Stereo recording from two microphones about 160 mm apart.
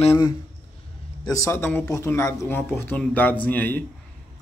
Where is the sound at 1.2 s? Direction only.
20° left (ahead or behind).